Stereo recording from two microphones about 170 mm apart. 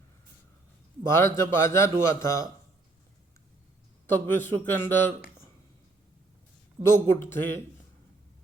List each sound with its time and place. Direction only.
1.0 s a man's voice: 15° left (ahead or behind)
4.1 s a man's voice: 10° left (ahead or behind)
6.8 s a man's voice: 15° left (ahead or behind)